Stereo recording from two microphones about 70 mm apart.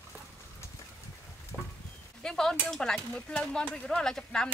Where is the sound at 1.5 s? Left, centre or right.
Centre.